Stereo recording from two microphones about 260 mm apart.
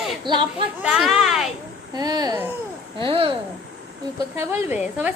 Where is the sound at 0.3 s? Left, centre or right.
Centre.